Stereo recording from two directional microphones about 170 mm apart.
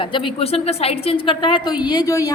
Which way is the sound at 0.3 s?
35° left (ahead or behind).